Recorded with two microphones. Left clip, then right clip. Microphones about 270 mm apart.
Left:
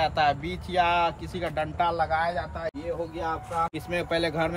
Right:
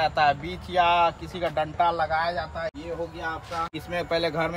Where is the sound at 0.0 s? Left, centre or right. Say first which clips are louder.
Right 2 dB; centre.